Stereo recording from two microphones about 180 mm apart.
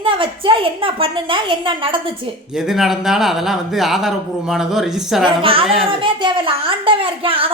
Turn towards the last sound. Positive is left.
turn(degrees=-30)  # may be behind; listen again after turning